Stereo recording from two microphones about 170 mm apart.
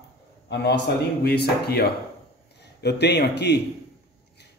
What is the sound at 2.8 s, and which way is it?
Speech, 80° left.